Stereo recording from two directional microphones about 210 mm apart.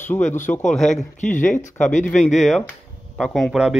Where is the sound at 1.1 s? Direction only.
35° left (ahead or behind).